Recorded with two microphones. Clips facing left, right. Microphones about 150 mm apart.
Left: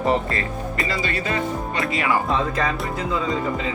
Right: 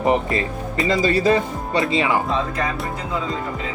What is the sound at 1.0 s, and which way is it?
Speech, 35° right (ahead or behind).